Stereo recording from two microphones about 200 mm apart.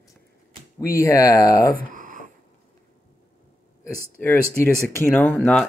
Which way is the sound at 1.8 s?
40° right (ahead or behind).